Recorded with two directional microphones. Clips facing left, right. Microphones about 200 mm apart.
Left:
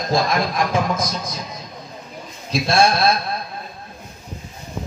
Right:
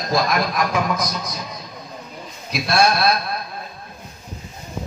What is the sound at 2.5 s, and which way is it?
Speech, 25° left (ahead or behind).